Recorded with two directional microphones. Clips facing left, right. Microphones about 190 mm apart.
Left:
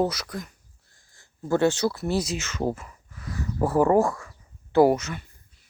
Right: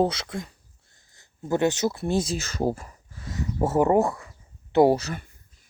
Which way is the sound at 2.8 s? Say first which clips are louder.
Even; 30° right (ahead or behind).